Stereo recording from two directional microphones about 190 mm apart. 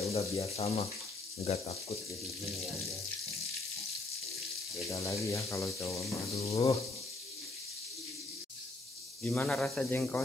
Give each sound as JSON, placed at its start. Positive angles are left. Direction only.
{"t": 0.0, "sound": "speech", "side_deg": 35}
{"t": 4.8, "sound": "speech", "side_deg": 15}
{"t": 9.2, "sound": "speech", "side_deg": 5}